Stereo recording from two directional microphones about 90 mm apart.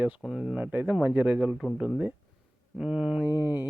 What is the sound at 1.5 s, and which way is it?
Speech, 5° right (ahead or behind).